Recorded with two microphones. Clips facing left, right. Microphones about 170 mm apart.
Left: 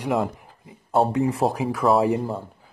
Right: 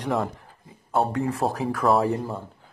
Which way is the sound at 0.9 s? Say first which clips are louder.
Left 3 dB; 25° left (ahead or behind).